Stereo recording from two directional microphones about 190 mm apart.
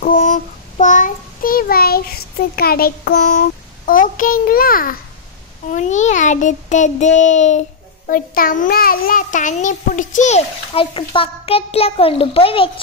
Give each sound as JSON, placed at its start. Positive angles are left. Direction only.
{"t": 0.0, "sound": "child singing", "side_deg": 45}
{"t": 5.7, "sound": "a child's voice", "side_deg": 40}